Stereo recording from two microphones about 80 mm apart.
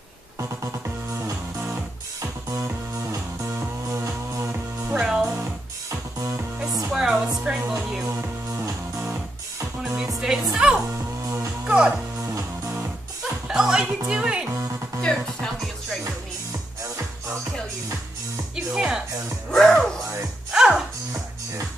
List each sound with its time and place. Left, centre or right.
2.5 s music: right
5.0 s music: centre
5.9 s music: right
6.9 s music: centre
8.1 s music: right
10.2 s music: centre
12.2 s music: right
13.2 s music: centre
15.0 s music: centre
18.7 s music: centre
19.5 s music: centre
20.5 s music: centre